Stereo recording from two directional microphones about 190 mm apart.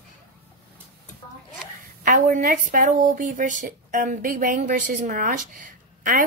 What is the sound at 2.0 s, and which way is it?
Speech, 45° right (ahead or behind).